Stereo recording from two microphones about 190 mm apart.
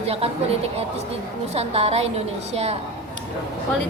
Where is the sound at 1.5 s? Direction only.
35° right (ahead or behind).